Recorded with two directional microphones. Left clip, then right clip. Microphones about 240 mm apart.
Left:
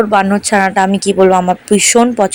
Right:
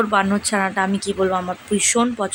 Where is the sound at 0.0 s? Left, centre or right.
Centre.